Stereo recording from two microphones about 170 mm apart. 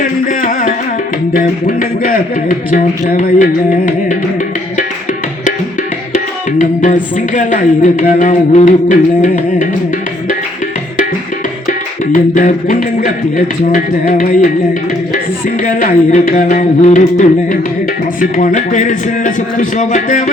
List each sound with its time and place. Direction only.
0.0 s music: 55° left (ahead or behind)
1.3 s a man's voice: 55° left (ahead or behind)
6.6 s a man's voice: 50° left (ahead or behind)
12.1 s a man's voice: 50° left (ahead or behind)